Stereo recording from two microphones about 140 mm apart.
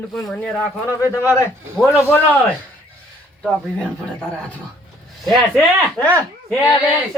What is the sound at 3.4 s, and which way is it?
A man's voice, 5° left (ahead or behind).